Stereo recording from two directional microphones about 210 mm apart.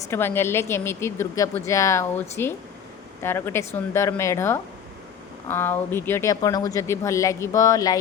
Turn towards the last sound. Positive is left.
turn(degrees=15)  # may be behind; listen again after turning